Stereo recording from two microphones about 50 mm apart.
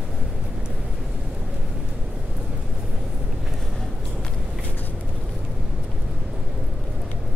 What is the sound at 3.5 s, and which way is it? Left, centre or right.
Vehicle, centre.